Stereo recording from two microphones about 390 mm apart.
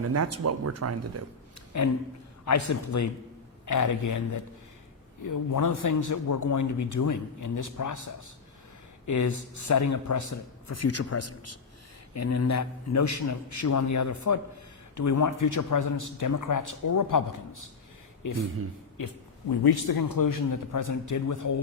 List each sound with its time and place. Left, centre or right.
0.1 s speech: right
1.7 s a man's voice: left
18.9 s a man's voice: left